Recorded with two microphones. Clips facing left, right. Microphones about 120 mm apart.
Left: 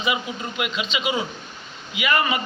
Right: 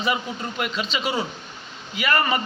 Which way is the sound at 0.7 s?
40° right (ahead or behind).